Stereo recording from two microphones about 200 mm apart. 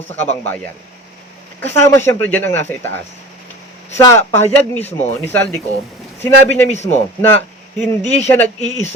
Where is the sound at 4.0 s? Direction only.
15° left (ahead or behind).